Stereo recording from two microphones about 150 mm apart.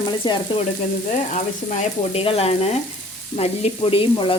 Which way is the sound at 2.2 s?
40° left (ahead or behind).